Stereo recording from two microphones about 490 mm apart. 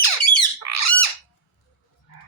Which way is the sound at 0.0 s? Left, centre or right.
Left.